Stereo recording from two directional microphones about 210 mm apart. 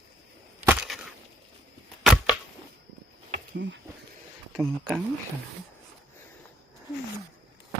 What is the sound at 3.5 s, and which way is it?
Speech, 60° right (ahead or behind).